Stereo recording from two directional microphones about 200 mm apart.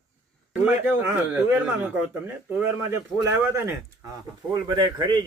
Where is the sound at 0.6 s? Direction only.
10° right (ahead or behind).